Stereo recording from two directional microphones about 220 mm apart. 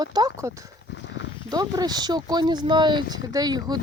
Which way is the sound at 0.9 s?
55° left (ahead or behind).